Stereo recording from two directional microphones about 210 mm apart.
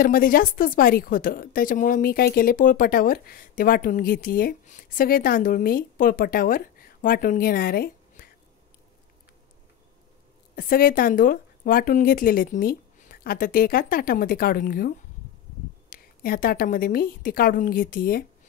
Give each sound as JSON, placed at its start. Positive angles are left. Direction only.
{"t": 0.0, "sound": "a woman's voice", "side_deg": 40}
{"t": 10.5, "sound": "a woman's voice", "side_deg": 45}